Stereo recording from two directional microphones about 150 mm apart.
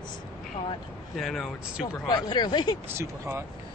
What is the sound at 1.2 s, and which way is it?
Speech, centre (ahead or behind).